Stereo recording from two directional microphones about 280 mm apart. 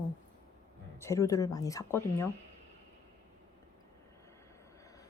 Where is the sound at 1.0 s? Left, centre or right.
Centre.